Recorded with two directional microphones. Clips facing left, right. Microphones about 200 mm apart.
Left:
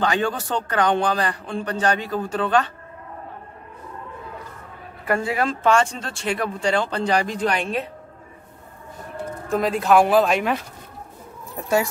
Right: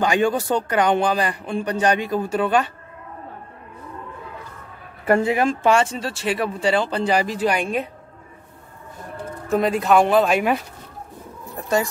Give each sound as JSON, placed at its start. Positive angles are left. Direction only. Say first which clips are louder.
{"t": 0.0, "sound": "speech", "louder": "right 3 dB", "side_deg": -10}
{"t": 5.0, "sound": "speech", "louder": "right 4 dB", "side_deg": -25}
{"t": 9.5, "sound": "speech", "louder": "right 1 dB", "side_deg": 0}